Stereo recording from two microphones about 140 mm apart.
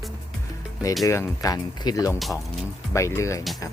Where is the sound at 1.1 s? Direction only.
20° left (ahead or behind).